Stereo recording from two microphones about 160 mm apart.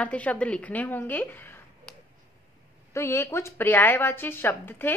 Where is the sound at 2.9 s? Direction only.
15° left (ahead or behind).